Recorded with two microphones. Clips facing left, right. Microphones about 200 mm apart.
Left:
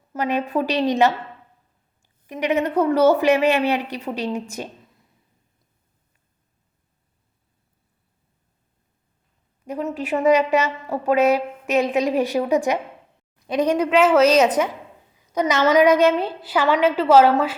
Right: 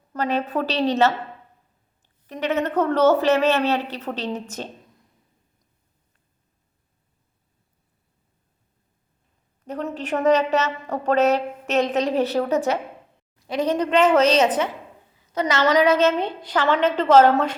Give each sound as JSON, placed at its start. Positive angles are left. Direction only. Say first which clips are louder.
{"t": 0.1, "sound": "a woman's voice", "louder": "left 1 dB", "side_deg": 15}
{"t": 9.6, "sound": "a woman's voice", "louder": "left 2 dB", "side_deg": 10}